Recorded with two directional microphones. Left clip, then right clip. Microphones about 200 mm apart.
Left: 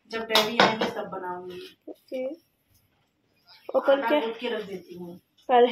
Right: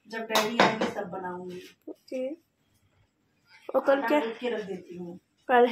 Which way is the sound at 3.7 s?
15° right (ahead or behind).